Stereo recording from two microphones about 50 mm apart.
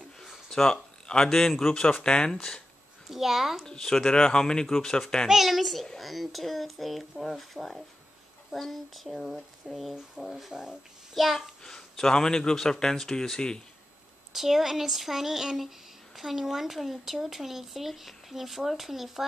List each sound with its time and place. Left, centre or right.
0.2 s a sound: centre
1.7 s speech: centre
3.1 s a child's voice: centre
3.6 s a child's voice: centre
5.3 s speech: centre
10.5 s a child's voice: centre
11.1 s a child's voice: centre
14.3 s speech: centre